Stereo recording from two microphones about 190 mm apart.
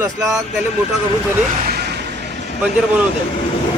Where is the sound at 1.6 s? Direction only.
55° right (ahead or behind).